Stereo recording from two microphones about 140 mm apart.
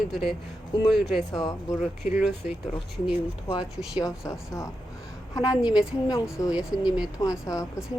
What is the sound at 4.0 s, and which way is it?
Speech, 25° left (ahead or behind).